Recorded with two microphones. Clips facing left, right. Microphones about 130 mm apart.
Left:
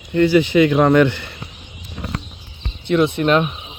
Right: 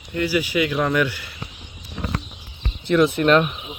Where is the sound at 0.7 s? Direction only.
55° left (ahead or behind).